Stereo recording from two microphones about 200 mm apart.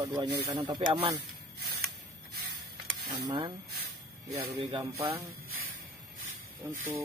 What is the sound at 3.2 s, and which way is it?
Speech, 25° right (ahead or behind).